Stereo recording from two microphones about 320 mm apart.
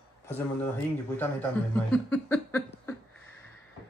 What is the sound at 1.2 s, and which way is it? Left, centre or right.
Speech, centre.